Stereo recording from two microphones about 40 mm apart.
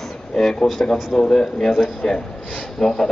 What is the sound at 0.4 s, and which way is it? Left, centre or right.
A man's voice, centre.